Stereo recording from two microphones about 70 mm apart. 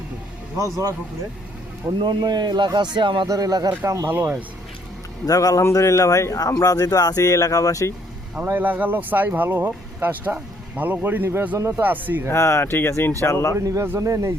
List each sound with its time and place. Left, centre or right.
0.5 s speech: right
1.9 s a man's voice: right
3.8 s speech: right
5.2 s speech: left
5.7 s speech: left
8.4 s speech: right
12.3 s speech: left
13.6 s speech: right